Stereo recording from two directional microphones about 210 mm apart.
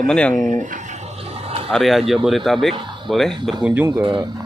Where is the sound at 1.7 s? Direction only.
Centre (ahead or behind).